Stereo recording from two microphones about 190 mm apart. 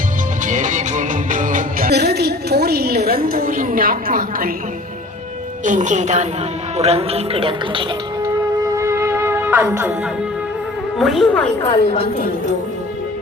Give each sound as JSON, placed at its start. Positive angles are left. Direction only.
{"t": 0.4, "sound": "music", "side_deg": -40}
{"t": 5.6, "sound": "speech", "side_deg": -40}
{"t": 8.7, "sound": "music", "side_deg": -15}
{"t": 10.9, "sound": "a woman's voice", "side_deg": 0}